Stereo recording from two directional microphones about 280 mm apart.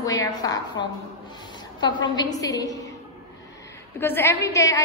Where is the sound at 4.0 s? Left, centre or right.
Centre.